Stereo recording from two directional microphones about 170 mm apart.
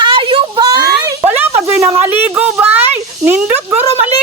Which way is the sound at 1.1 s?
15° right (ahead or behind).